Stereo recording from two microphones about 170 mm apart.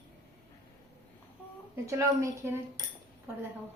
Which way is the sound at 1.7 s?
20° right (ahead or behind).